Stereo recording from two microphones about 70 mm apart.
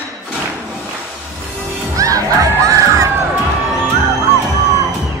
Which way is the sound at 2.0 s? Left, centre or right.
Right.